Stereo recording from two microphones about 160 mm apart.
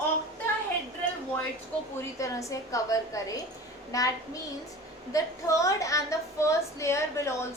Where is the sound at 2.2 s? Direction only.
20° left (ahead or behind).